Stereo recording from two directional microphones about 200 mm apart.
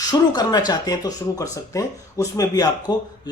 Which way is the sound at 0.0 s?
20° left (ahead or behind).